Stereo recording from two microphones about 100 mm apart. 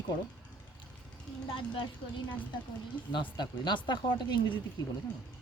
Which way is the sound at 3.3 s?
50° left (ahead or behind).